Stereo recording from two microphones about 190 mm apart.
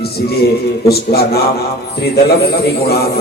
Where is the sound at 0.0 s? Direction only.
55° left (ahead or behind).